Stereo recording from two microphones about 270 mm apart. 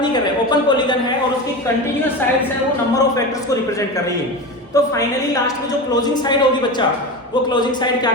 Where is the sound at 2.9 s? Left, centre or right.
Centre.